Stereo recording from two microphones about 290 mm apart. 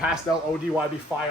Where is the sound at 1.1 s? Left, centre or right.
Centre.